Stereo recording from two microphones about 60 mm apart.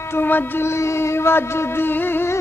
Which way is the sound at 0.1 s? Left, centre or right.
Left.